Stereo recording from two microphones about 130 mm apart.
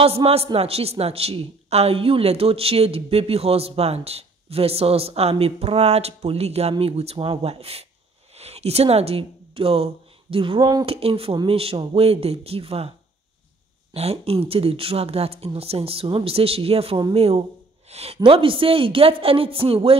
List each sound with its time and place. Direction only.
0.0 s a woman's voice: 50° right (ahead or behind)
10.6 s speech: 30° right (ahead or behind)
10.9 s a woman's voice: 50° right (ahead or behind)
13.9 s a woman's voice: 50° right (ahead or behind)